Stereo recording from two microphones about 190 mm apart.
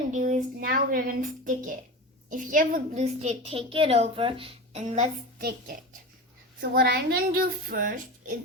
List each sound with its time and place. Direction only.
0.1 s a woman's voice: 40° right (ahead or behind)
5.4 s a woman's voice: 55° right (ahead or behind)